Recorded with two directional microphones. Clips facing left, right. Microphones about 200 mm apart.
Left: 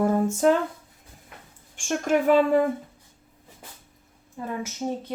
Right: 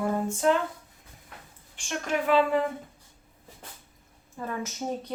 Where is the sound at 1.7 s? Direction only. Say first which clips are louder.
Left 7 dB; 45° left (ahead or behind).